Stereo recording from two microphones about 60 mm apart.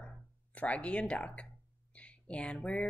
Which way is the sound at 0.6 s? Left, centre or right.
Left.